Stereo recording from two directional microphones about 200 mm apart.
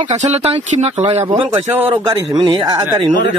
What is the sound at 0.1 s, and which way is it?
Speech, 35° right (ahead or behind).